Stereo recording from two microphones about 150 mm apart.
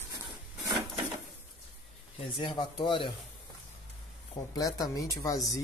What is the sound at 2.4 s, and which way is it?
Speech, 30° left (ahead or behind).